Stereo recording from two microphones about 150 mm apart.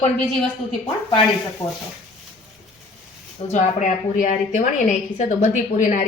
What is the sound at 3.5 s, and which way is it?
A woman's voice, 55° left (ahead or behind).